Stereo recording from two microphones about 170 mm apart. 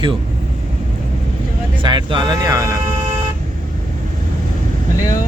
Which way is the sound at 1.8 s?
25° right (ahead or behind).